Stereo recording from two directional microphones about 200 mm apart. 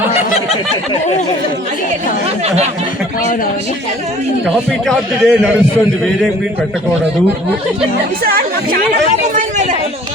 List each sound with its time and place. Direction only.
0.1 s a sound: 30° left (ahead or behind)
4.4 s a man's voice: centre (ahead or behind)
8.2 s speech: 45° right (ahead or behind)